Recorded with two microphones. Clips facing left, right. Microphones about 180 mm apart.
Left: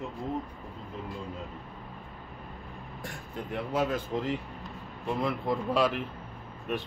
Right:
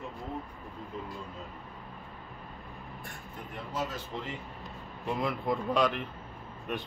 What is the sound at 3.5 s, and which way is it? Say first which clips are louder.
Speech: left 7 dB; 60° left (ahead or behind).